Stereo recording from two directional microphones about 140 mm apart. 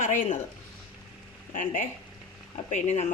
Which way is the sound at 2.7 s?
55° left (ahead or behind).